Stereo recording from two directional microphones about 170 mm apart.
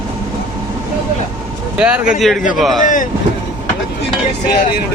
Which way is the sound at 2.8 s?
50° left (ahead or behind).